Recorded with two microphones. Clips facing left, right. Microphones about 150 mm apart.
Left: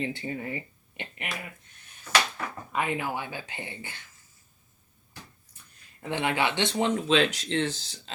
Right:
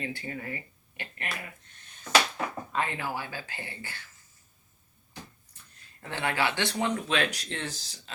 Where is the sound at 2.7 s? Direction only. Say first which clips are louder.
Left 4 dB; 15° left (ahead or behind).